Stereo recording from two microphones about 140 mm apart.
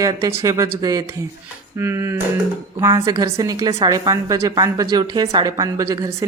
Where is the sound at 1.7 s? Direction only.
20° right (ahead or behind).